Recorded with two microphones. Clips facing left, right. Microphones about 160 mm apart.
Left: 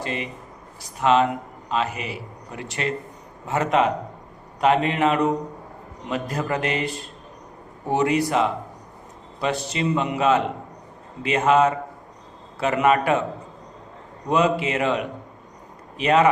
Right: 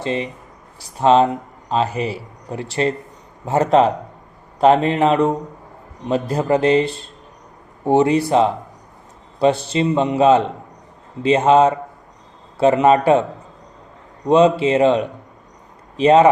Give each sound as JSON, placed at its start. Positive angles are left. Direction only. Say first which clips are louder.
{"t": 0.0, "sound": "a man's voice", "louder": "right 6 dB", "side_deg": -30}
{"t": 14.3, "sound": "a man's voice", "louder": "right 7 dB", "side_deg": -30}